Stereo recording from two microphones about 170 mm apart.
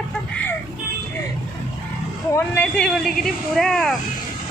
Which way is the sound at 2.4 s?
10° left (ahead or behind).